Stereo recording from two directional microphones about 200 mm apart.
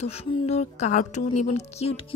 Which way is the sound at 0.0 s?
30° left (ahead or behind).